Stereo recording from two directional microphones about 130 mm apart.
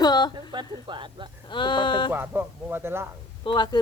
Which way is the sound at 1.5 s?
40° left (ahead or behind).